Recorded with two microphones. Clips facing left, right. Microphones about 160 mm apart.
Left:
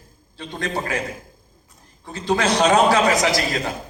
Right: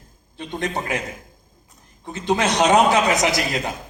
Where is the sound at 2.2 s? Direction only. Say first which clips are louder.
Even; 20° right (ahead or behind).